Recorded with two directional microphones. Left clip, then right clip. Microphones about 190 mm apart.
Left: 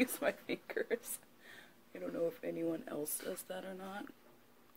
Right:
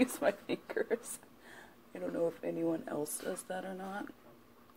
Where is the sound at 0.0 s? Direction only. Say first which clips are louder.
Right 4 dB; 15° left (ahead or behind).